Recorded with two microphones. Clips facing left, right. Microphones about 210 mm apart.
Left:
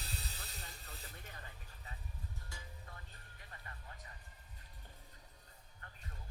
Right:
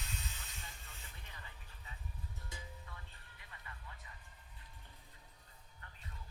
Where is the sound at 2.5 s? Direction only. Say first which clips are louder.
Right 6 dB; 20° right (ahead or behind).